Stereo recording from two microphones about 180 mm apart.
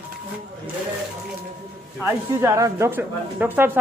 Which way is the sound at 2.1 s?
15° right (ahead or behind).